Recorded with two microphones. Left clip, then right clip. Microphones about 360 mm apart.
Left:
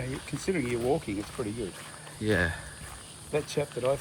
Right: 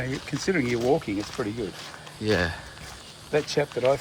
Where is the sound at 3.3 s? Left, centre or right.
Right.